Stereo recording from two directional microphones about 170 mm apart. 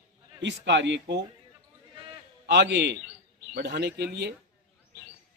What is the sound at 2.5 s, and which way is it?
Speech, 90° right.